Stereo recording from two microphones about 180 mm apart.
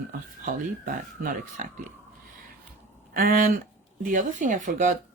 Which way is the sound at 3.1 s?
55° right (ahead or behind).